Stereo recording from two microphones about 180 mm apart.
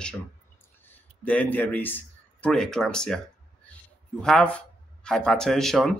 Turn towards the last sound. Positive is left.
turn(degrees=0)  # may be behind; listen again after turning